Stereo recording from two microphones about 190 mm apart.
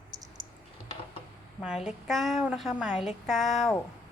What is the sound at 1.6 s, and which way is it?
A woman's voice, 5° right (ahead or behind).